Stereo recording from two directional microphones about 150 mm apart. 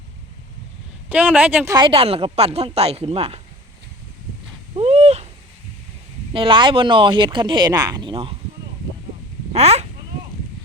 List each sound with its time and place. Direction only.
1.1 s speech: 10° right (ahead or behind)
1.7 s speech: 35° right (ahead or behind)
4.8 s owl: 45° right (ahead or behind)
6.3 s speech: 35° right (ahead or behind)
9.5 s speech: 45° right (ahead or behind)